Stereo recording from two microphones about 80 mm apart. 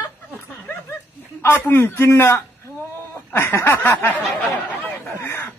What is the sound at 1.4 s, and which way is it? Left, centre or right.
A man's voice, left.